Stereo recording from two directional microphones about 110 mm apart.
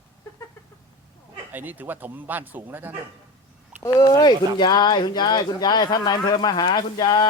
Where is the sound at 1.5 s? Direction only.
15° right (ahead or behind).